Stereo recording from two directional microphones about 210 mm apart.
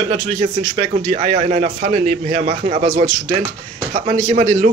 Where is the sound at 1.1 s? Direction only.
25° right (ahead or behind).